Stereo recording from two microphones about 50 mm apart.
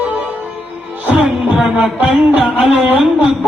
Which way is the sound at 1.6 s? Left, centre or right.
Right.